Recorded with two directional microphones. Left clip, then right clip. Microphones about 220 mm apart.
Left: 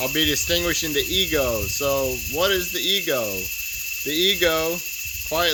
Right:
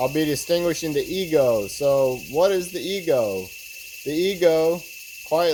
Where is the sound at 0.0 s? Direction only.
35° left (ahead or behind).